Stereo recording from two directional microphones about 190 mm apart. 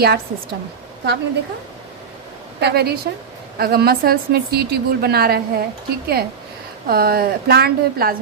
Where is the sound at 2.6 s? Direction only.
55° right (ahead or behind).